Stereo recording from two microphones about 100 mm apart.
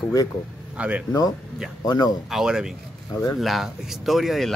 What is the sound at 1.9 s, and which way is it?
Speech, 40° left (ahead or behind).